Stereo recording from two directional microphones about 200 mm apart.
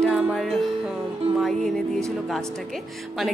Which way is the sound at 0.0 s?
5° right (ahead or behind).